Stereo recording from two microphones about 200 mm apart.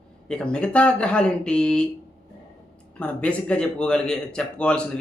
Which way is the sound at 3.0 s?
5° left (ahead or behind).